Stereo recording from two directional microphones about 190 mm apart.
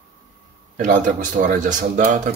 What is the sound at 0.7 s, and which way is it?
Speech, 40° right (ahead or behind).